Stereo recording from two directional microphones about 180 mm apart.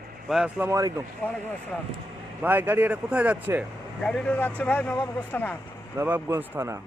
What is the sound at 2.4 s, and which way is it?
Speech, 10° right (ahead or behind).